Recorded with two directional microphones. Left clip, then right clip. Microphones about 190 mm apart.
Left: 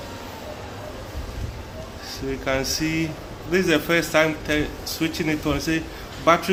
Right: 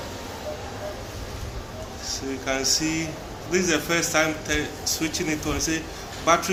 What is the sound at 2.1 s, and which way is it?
Speech, 50° left (ahead or behind).